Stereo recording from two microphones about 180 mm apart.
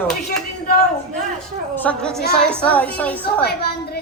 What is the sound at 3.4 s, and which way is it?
Speech, 65° left (ahead or behind).